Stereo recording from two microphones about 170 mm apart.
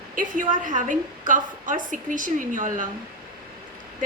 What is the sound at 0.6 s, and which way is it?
A woman's voice, 50° right (ahead or behind).